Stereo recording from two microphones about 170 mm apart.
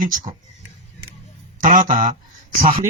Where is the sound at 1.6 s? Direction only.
50° right (ahead or behind).